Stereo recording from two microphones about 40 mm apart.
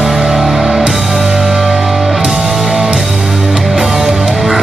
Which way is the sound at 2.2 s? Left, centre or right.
Centre.